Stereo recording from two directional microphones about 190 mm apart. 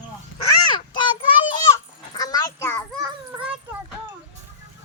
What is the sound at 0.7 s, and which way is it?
Child singing, 25° left (ahead or behind).